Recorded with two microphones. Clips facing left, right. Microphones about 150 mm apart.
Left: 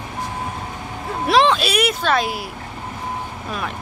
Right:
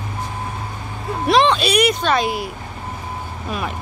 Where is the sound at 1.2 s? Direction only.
Centre (ahead or behind).